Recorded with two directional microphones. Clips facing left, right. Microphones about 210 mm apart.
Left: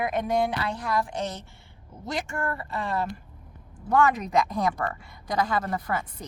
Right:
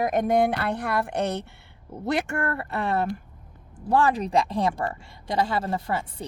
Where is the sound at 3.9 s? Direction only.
30° right (ahead or behind).